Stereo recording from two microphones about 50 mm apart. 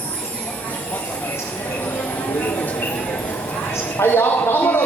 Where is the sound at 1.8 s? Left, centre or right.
Left.